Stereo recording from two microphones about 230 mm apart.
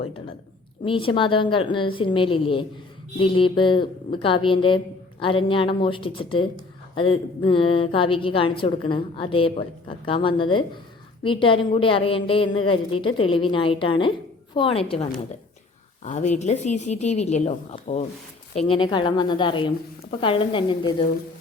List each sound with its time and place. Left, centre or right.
0.0 s a woman's voice: left
16.0 s a woman's voice: left